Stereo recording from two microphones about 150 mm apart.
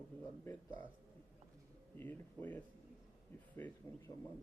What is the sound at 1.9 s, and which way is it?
Speech, 15° left (ahead or behind).